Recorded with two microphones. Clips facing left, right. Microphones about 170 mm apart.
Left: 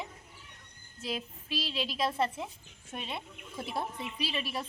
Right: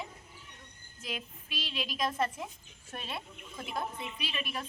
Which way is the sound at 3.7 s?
35° left (ahead or behind).